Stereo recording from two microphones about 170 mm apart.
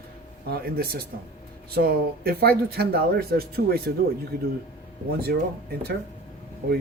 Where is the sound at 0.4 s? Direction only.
65° right (ahead or behind).